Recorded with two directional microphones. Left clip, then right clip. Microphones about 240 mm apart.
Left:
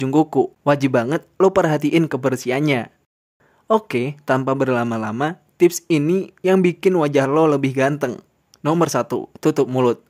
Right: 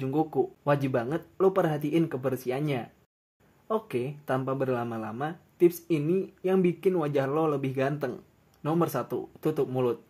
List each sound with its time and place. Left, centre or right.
0.0 s speech: left